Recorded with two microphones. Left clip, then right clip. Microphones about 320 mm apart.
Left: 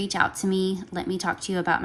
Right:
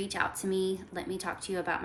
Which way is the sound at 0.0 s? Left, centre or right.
Centre.